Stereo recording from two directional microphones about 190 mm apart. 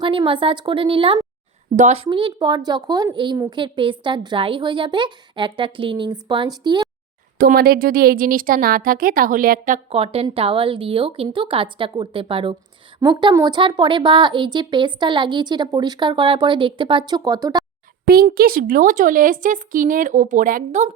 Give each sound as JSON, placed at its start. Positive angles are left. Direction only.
{"t": 0.0, "sound": "a woman's voice", "side_deg": -25}
{"t": 7.3, "sound": "a woman's voice", "side_deg": -50}
{"t": 18.0, "sound": "a woman's voice", "side_deg": -50}